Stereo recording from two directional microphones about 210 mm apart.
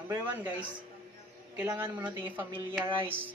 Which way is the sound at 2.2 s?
10° right (ahead or behind).